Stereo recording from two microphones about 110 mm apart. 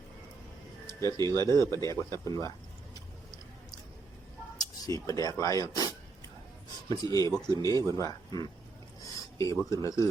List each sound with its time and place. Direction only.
1.0 s speech: 25° left (ahead or behind)
2.9 s a sound: 35° left (ahead or behind)
5.0 s speech: 30° left (ahead or behind)
6.9 s speech: 35° left (ahead or behind)
9.0 s a sound: 30° left (ahead or behind)
9.6 s speech: 30° left (ahead or behind)